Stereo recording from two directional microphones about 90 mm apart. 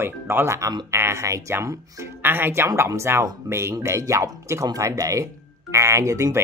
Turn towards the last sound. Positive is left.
turn(degrees=-35)  # may be behind; listen again after turning